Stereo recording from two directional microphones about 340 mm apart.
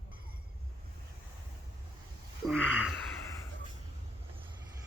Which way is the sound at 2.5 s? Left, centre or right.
Centre.